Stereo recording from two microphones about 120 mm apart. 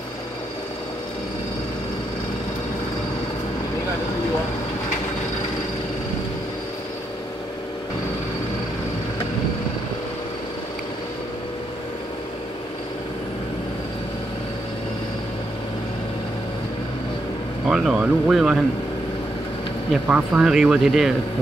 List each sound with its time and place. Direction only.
17.6 s speech: 5° right (ahead or behind)
19.9 s speech: 10° right (ahead or behind)